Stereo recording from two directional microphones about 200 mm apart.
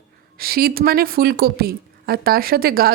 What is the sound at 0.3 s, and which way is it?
Speech, 50° right (ahead or behind).